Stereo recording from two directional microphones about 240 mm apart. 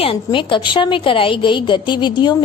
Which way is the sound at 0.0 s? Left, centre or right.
Left.